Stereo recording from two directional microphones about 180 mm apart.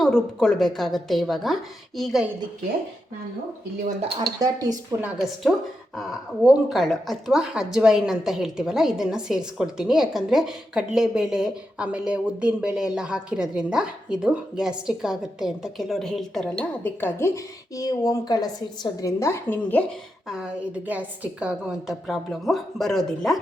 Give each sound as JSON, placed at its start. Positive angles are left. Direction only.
{"t": 0.0, "sound": "a woman's voice", "side_deg": 0}
{"t": 4.4, "sound": "speech", "side_deg": -20}
{"t": 4.9, "sound": "a woman's voice", "side_deg": -5}
{"t": 20.2, "sound": "a woman's voice", "side_deg": -5}